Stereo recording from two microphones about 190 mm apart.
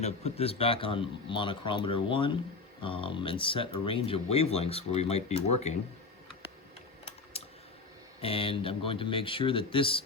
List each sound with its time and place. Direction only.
0.0 s speech: 35° left (ahead or behind)
7.3 s computer keyboard: 30° left (ahead or behind)
8.2 s speech: 30° left (ahead or behind)